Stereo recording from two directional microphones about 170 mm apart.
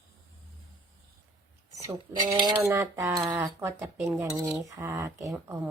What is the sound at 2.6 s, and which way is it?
Speech, 15° right (ahead or behind).